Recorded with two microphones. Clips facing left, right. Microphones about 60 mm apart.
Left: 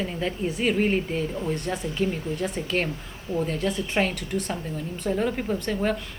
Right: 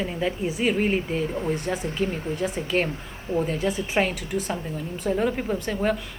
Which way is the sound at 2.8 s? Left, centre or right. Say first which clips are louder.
Right 1 dB; right.